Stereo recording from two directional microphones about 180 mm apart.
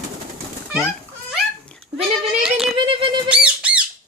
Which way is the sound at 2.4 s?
Centre (ahead or behind).